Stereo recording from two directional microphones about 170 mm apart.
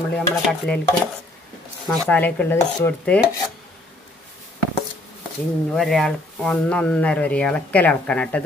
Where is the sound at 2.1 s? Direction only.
10° left (ahead or behind).